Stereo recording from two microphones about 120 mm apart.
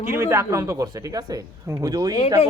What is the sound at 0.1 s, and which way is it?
Speech, 20° right (ahead or behind).